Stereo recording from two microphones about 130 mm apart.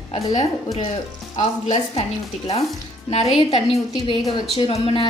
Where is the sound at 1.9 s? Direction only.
50° left (ahead or behind).